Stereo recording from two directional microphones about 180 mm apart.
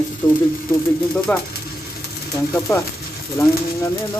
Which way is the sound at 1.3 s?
5° left (ahead or behind).